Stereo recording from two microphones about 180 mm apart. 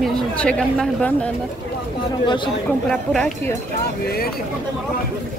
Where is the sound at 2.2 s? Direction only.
25° left (ahead or behind).